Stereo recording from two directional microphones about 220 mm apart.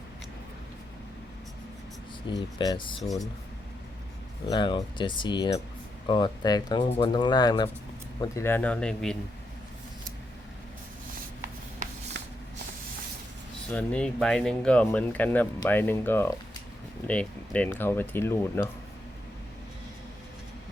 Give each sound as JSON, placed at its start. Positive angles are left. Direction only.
{"t": 2.3, "sound": "speech", "side_deg": 20}
{"t": 4.4, "sound": "speech", "side_deg": 20}
{"t": 12.1, "sound": "spray", "side_deg": -50}
{"t": 13.7, "sound": "speech", "side_deg": 5}